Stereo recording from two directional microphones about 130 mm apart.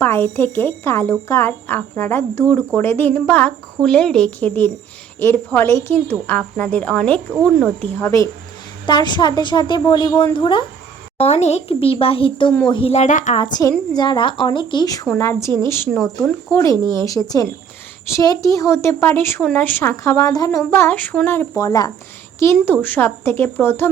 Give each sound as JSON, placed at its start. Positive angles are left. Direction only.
{"t": 0.0, "sound": "speech", "side_deg": 15}
{"t": 7.9, "sound": "speech", "side_deg": 25}
{"t": 8.9, "sound": "a woman's voice", "side_deg": 35}
{"t": 11.2, "sound": "a child's voice", "side_deg": 55}
{"t": 12.9, "sound": "speech", "side_deg": 70}
{"t": 13.5, "sound": "a woman's voice", "side_deg": 30}
{"t": 15.2, "sound": "speech", "side_deg": 20}
{"t": 22.6, "sound": "speech", "side_deg": 15}